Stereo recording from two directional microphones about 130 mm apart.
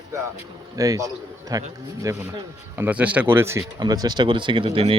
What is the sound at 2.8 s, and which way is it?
Speech, 10° right (ahead or behind).